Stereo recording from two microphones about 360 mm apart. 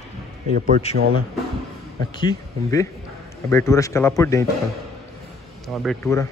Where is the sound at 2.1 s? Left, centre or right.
Centre.